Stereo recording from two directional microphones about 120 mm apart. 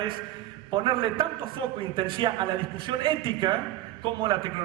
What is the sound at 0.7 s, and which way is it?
A man's voice, 45° right (ahead or behind).